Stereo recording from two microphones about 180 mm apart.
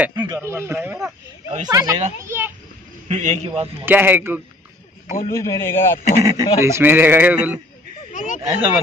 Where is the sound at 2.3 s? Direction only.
10° right (ahead or behind).